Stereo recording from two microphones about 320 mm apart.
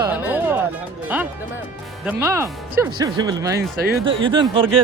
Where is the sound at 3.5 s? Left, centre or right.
Right.